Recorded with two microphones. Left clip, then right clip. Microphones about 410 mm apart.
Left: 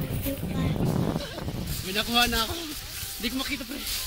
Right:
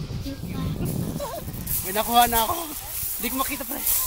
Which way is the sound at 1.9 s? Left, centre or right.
Centre.